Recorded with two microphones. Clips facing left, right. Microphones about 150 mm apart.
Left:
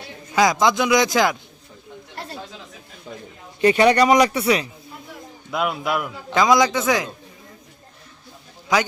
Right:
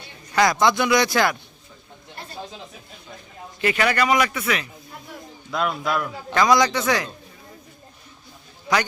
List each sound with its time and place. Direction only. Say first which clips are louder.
0.3 s a man's voice: left 1 dB; 5° left (ahead or behind)
0.8 s a man's voice: left 2 dB; 15° left (ahead or behind)
2.3 s chatter: right 4 dB; 20° right (ahead or behind)
3.6 s speech: left 6 dB; 30° left (ahead or behind)
5.5 s a man's voice: left 1 dB; 5° left (ahead or behind)
6.7 s a man's voice: left 2 dB; 5° left (ahead or behind)